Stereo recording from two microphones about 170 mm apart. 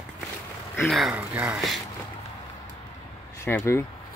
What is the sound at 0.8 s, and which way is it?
Speech, centre (ahead or behind).